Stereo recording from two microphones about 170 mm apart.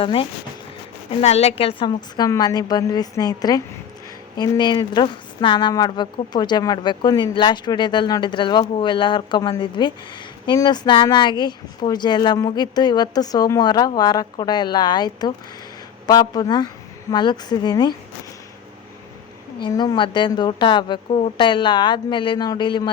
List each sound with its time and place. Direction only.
0.0 s a woman's voice: 30° left (ahead or behind)
19.6 s a woman's voice: 25° left (ahead or behind)